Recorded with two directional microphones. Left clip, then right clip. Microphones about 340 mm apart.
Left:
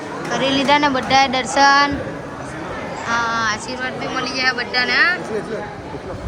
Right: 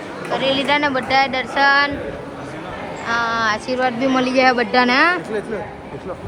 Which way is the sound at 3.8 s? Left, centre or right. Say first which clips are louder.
Right 5 dB; centre.